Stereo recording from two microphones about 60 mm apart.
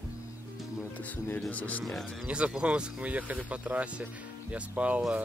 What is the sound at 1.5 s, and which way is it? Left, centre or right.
Speech, left.